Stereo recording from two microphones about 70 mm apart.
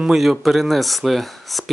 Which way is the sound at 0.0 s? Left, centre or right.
Centre.